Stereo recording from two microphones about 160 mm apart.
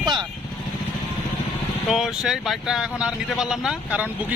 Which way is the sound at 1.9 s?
Centre (ahead or behind).